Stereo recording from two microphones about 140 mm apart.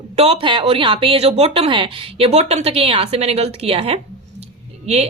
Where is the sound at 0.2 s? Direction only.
40° right (ahead or behind).